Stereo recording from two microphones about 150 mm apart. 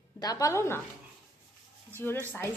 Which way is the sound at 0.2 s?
25° left (ahead or behind).